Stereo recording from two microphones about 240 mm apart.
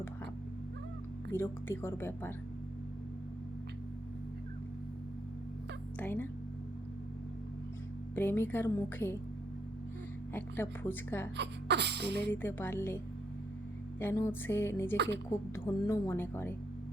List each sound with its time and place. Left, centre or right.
1.3 s a woman's voice: centre
6.0 s a woman's voice: centre
8.1 s a woman's voice: centre
10.3 s a woman's voice: centre
11.3 s sneeze: right
12.3 s a woman's voice: centre
14.0 s a woman's voice: centre
14.9 s speech: right
15.5 s a woman's voice: centre